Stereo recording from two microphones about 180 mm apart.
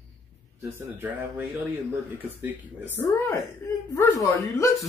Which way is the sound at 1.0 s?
10° right (ahead or behind).